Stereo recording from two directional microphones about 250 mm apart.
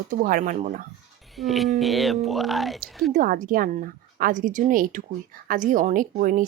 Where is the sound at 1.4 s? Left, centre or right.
Centre.